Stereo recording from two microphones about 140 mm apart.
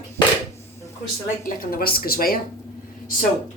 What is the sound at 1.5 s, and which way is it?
Speech, 90° left.